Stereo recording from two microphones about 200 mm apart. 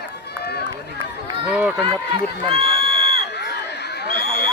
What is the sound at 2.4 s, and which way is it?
Crowd, 30° right (ahead or behind).